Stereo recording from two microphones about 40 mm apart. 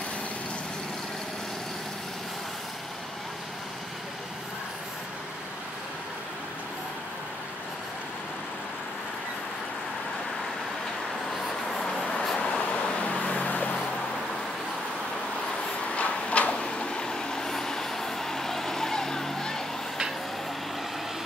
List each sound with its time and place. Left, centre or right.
12.1 s vehicle: centre
12.4 s vehicle: left
15.9 s a sound: left
16.5 s vehicle: left